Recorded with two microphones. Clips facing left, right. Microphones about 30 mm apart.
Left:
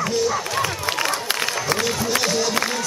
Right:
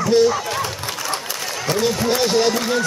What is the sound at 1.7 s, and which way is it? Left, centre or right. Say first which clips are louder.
Speech: right 3 dB; left.